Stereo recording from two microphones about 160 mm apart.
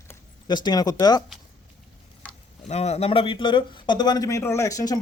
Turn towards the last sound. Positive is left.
turn(degrees=20)  # may be behind; listen again after turning